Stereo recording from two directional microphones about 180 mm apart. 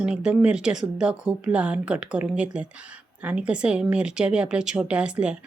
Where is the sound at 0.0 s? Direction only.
5° right (ahead or behind).